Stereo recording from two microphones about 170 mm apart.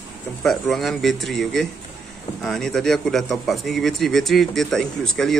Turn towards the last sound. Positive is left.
turn(degrees=0)  # may be behind; listen again after turning